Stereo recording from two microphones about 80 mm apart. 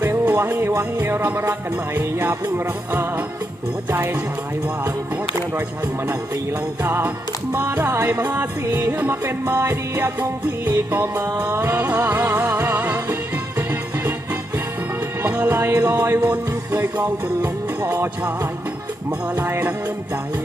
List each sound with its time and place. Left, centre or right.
0.0 s music: right
6.8 s music: right
15.3 s music: right
19.4 s music: right